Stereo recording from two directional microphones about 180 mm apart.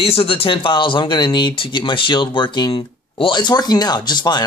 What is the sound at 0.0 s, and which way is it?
Speech, 30° left (ahead or behind).